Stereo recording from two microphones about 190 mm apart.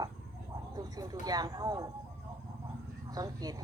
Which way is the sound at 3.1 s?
20° right (ahead or behind).